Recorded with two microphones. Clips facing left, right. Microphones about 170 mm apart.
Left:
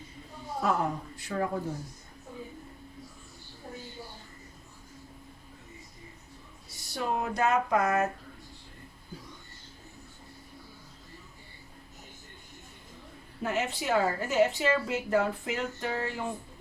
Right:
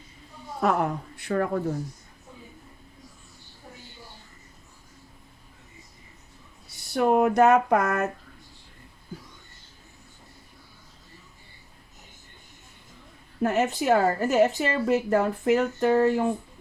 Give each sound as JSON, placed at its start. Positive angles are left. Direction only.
{"t": 0.6, "sound": "a woman's voice", "side_deg": -65}
{"t": 6.9, "sound": "a sound", "side_deg": -60}
{"t": 13.4, "sound": "a woman's voice", "side_deg": -50}